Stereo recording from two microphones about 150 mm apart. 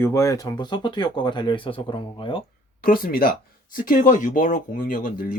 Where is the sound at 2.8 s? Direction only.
75° left (ahead or behind).